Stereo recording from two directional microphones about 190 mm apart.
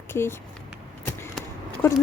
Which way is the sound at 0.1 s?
10° left (ahead or behind).